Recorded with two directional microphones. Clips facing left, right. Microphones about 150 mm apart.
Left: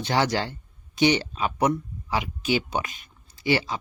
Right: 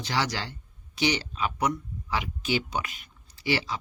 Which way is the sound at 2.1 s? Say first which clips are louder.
Left 3 dB; 20° left (ahead or behind).